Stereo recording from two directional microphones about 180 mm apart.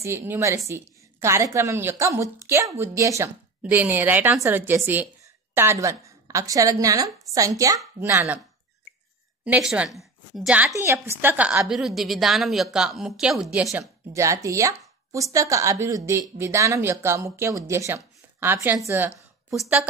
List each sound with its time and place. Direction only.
0.0 s a woman's voice: 15° right (ahead or behind)
9.4 s a woman's voice: 5° right (ahead or behind)